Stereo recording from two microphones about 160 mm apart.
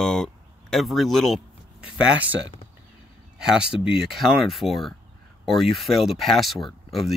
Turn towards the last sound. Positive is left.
turn(degrees=0)  # may be behind; listen again after turning